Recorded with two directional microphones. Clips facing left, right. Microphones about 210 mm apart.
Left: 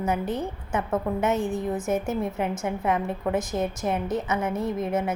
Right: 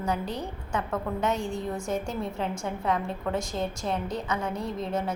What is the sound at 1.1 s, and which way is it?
A woman's voice, 15° left (ahead or behind).